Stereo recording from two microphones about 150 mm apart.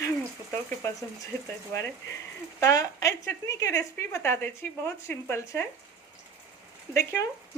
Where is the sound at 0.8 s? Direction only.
20° left (ahead or behind).